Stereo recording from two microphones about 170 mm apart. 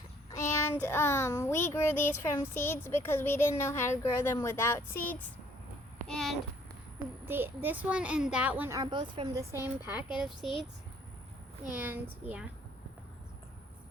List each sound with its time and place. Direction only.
0.3 s child singing: 15° left (ahead or behind)
6.1 s a sound: 5° left (ahead or behind)
7.3 s a child's voice: 10° right (ahead or behind)
8.8 s speech: 25° right (ahead or behind)
9.4 s a child's voice: 15° right (ahead or behind)
11.7 s a child's voice: 10° right (ahead or behind)